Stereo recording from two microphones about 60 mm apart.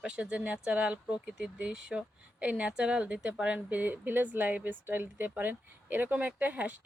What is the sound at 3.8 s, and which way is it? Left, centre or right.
Speech, right.